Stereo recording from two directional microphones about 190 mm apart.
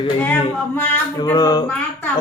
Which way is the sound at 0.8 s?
10° left (ahead or behind).